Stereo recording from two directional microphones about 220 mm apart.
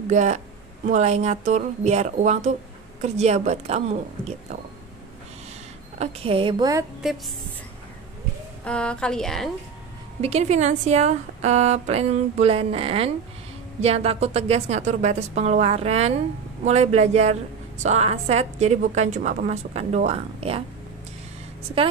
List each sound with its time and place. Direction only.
0.1 s a woman's voice: 35° right (ahead or behind)
5.9 s a woman's voice: 25° right (ahead or behind)
8.6 s a woman's voice: 5° left (ahead or behind)
10.2 s a woman's voice: 30° right (ahead or behind)